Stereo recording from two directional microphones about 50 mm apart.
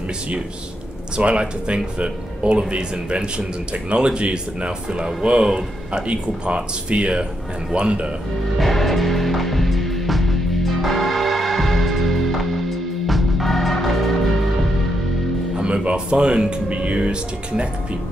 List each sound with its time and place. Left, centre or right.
1.1 s speech: right
8.5 s music: centre
15.5 s speech: right